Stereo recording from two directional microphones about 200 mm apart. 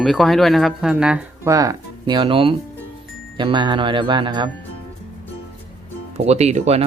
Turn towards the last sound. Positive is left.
turn(degrees=-30)  # may be behind; listen again after turning